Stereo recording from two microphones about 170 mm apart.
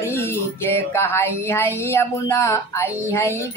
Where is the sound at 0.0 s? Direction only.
15° left (ahead or behind).